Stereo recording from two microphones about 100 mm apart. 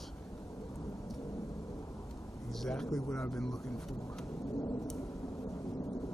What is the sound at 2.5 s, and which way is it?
Speech, 5° left (ahead or behind).